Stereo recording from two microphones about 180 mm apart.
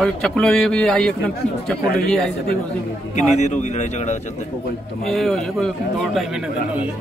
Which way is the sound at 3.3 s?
40° left (ahead or behind).